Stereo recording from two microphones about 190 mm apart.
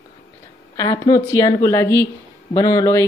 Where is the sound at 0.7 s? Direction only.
15° left (ahead or behind).